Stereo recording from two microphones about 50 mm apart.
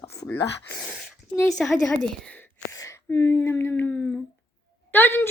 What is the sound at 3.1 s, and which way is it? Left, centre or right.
Speech, left.